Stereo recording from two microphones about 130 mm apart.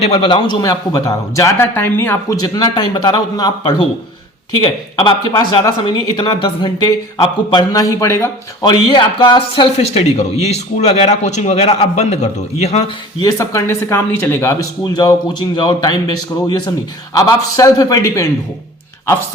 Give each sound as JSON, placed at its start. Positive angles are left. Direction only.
{"t": 0.0, "sound": "speech", "side_deg": 45}
{"t": 0.6, "sound": "speech", "side_deg": 25}
{"t": 8.6, "sound": "a man's voice", "side_deg": 35}
{"t": 13.1, "sound": "speech", "side_deg": 25}